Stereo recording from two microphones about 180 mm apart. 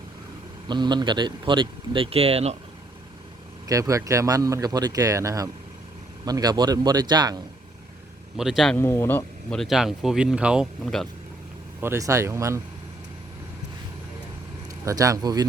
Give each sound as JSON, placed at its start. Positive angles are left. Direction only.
{"t": 0.7, "sound": "speech", "side_deg": -25}
{"t": 3.7, "sound": "speech", "side_deg": -15}
{"t": 8.4, "sound": "speech", "side_deg": 0}
{"t": 8.8, "sound": "speech", "side_deg": 15}
{"t": 11.8, "sound": "speech", "side_deg": -15}
{"t": 14.8, "sound": "speech", "side_deg": -20}